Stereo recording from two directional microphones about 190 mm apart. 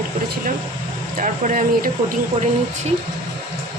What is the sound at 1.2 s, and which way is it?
Speech, 50° right (ahead or behind).